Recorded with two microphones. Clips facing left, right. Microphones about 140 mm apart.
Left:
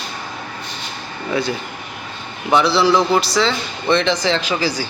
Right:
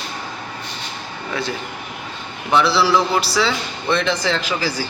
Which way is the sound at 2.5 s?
Centre (ahead or behind).